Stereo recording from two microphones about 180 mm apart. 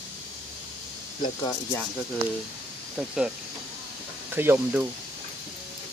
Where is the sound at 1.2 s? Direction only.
20° left (ahead or behind).